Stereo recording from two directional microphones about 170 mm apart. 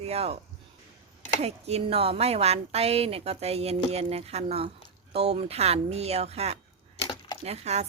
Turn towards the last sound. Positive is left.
turn(degrees=-40)  # may be behind; listen again after turning